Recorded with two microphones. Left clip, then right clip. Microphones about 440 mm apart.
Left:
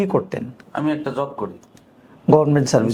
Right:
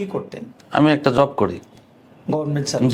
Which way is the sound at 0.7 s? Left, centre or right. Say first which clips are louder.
Right 7 dB; right.